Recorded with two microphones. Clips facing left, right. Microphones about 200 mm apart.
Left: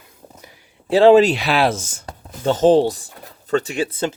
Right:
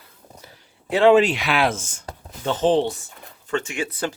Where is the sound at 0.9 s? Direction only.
35° left (ahead or behind).